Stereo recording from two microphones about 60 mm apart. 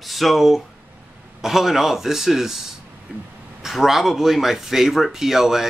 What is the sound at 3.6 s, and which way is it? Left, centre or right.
Speech, centre.